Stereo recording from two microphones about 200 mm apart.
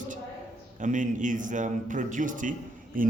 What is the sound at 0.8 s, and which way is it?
A man's voice, 40° right (ahead or behind).